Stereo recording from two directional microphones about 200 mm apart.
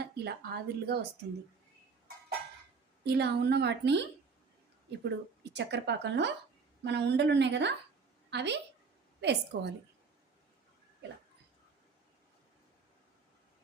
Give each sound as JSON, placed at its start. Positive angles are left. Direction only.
{"t": 0.0, "sound": "speech", "side_deg": -55}
{"t": 3.0, "sound": "a woman's voice", "side_deg": -55}